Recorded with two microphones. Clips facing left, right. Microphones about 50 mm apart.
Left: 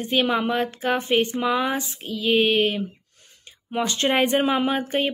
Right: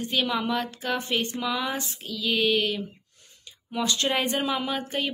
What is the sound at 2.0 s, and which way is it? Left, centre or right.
A woman's voice, left.